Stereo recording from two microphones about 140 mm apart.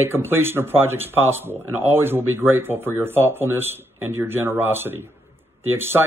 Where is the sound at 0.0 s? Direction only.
15° right (ahead or behind).